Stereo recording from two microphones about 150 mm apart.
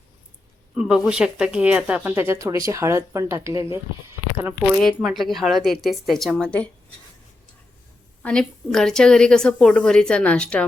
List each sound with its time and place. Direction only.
0.8 s speech: 5° right (ahead or behind)
4.9 s a woman's voice: centre (ahead or behind)
8.2 s a woman's voice: 5° left (ahead or behind)